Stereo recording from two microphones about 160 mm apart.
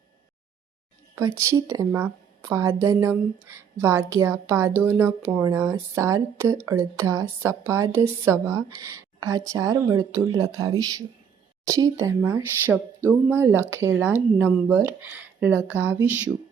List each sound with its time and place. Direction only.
1.1 s a woman's voice: 15° right (ahead or behind)